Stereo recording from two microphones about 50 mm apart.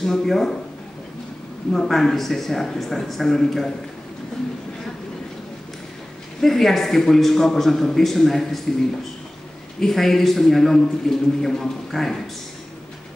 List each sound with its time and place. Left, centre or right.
0.0 s speech: centre
1.7 s a man's voice: centre
6.4 s a man's voice: centre
9.8 s a man's voice: centre